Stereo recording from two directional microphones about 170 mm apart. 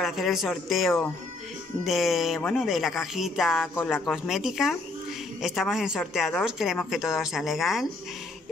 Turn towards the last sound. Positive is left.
turn(degrees=0)  # may be behind; listen again after turning